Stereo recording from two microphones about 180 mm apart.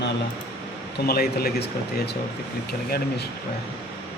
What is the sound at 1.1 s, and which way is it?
Speech, 60° left (ahead or behind).